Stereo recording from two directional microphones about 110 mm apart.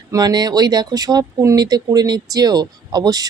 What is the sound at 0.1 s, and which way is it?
Speech, 35° right (ahead or behind).